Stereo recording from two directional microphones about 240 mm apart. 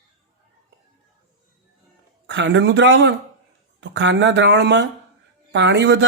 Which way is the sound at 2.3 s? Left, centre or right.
Right.